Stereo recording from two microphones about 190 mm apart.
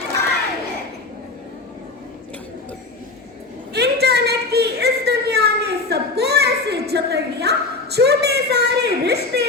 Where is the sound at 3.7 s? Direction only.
60° right (ahead or behind).